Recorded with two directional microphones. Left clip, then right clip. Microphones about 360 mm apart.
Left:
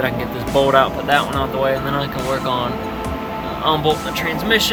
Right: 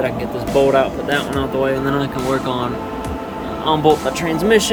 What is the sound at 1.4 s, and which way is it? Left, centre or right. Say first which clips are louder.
Speech: even; centre.